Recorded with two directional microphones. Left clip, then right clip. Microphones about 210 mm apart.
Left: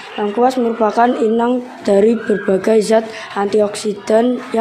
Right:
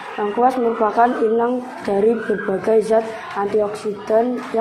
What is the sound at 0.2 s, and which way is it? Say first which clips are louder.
A woman's voice: left 2 dB; 35° left (ahead or behind).